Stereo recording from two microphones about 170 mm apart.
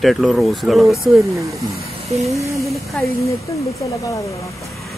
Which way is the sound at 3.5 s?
20° left (ahead or behind).